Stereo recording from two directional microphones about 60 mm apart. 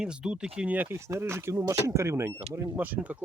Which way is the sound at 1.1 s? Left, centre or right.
Right.